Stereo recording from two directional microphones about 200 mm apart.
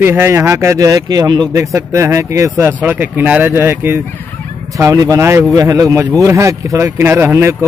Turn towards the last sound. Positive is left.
turn(degrees=-15)  # may be behind; listen again after turning